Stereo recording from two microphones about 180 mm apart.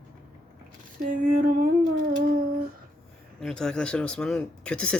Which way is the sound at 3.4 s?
5° left (ahead or behind).